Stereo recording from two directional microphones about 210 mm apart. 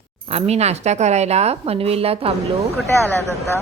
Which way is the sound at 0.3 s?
30° right (ahead or behind).